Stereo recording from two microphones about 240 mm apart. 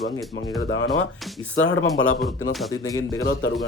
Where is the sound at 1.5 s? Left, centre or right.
Left.